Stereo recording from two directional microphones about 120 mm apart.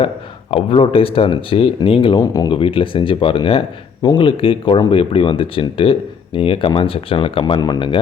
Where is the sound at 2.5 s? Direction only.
50° left (ahead or behind).